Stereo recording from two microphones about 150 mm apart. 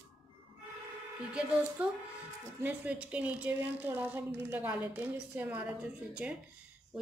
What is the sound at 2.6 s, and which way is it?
A woman's voice, 10° right (ahead or behind).